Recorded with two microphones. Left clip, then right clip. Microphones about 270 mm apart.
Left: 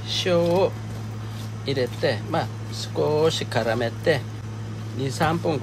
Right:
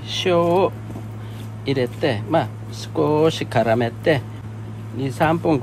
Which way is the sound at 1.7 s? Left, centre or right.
Right.